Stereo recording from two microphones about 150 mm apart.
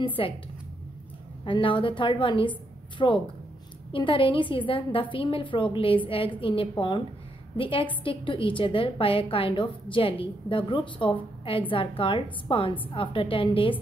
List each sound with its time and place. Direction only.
0.0 s a woman's voice: 35° left (ahead or behind)
1.4 s a woman's voice: 35° left (ahead or behind)